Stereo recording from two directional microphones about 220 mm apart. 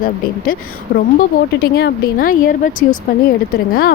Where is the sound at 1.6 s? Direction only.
45° left (ahead or behind).